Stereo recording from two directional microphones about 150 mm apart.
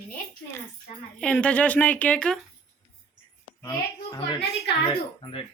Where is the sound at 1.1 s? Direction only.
5° left (ahead or behind).